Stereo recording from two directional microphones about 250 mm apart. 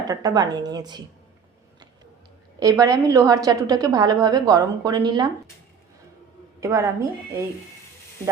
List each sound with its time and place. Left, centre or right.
0.1 s a woman's voice: centre
2.6 s a woman's voice: centre
6.6 s a woman's voice: centre